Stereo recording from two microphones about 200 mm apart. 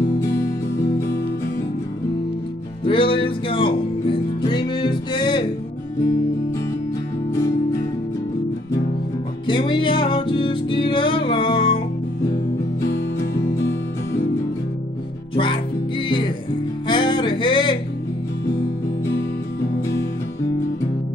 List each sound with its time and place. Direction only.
0.8 s music: 15° left (ahead or behind)
2.8 s music: 25° left (ahead or behind)
9.5 s music: 25° left (ahead or behind)
15.3 s music: 25° left (ahead or behind)
16.8 s music: 25° left (ahead or behind)